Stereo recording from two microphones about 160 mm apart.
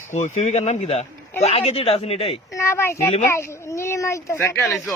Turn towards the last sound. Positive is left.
turn(degrees=0)  # may be behind; listen again after turning